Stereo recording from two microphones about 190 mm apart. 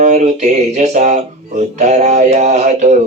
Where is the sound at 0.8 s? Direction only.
40° right (ahead or behind).